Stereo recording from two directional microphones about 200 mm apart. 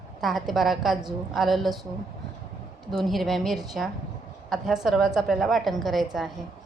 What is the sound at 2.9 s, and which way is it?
A woman's voice, centre (ahead or behind).